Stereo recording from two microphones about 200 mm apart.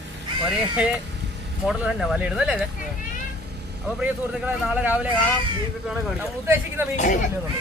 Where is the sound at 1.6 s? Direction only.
Centre (ahead or behind).